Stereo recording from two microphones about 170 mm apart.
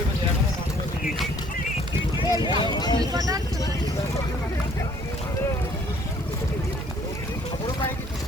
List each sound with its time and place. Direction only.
2.1 s speech: 25° left (ahead or behind)
3.1 s speech: 20° right (ahead or behind)